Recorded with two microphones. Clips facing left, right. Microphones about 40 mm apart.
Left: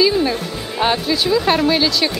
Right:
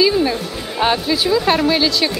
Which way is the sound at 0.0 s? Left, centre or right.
Centre.